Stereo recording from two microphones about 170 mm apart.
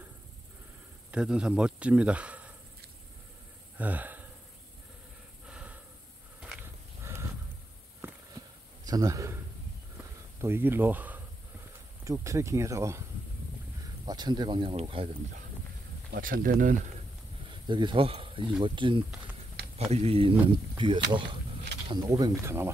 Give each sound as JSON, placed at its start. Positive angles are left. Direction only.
{"t": 1.1, "sound": "speech", "side_deg": -5}
{"t": 3.7, "sound": "a sound", "side_deg": -10}
{"t": 5.5, "sound": "breathing", "side_deg": -5}
{"t": 6.4, "sound": "a sound", "side_deg": -10}
{"t": 8.8, "sound": "a man's voice", "side_deg": -20}
{"t": 9.9, "sound": "a sound", "side_deg": -15}
{"t": 12.0, "sound": "speech", "side_deg": -20}
{"t": 14.0, "sound": "speech", "side_deg": -25}
{"t": 16.1, "sound": "speech", "side_deg": -60}
{"t": 17.5, "sound": "speech", "side_deg": -30}